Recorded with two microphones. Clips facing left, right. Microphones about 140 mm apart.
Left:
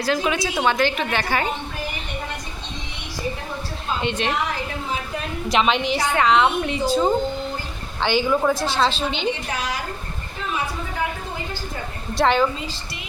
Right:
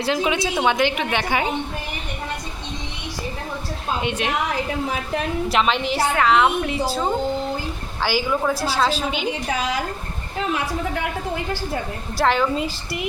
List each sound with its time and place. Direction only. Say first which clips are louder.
0.0 s a woman's voice: right 1 dB; 20° right (ahead or behind)
4.0 s a woman's voice: left 2 dB; 10° right (ahead or behind)
5.5 s a woman's voice: left 3 dB; centre (ahead or behind)
8.0 s a woman's voice: left 2 dB; 5° right (ahead or behind)
10.4 s a woman's voice: right 3 dB; 85° right
12.1 s a woman's voice: left 1 dB; centre (ahead or behind)